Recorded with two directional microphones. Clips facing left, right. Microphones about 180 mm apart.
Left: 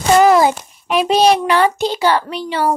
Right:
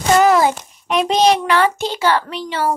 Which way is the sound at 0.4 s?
10° left (ahead or behind).